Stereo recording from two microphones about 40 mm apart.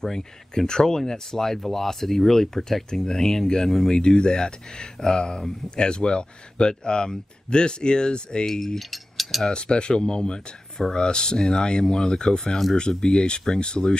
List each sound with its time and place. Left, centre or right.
0.0 s speech: centre
8.9 s a sound: centre
9.4 s speech: left